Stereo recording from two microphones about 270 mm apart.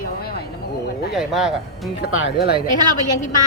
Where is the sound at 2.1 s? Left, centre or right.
Left.